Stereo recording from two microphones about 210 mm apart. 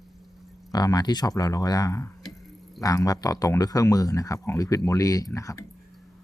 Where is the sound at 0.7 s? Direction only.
20° left (ahead or behind).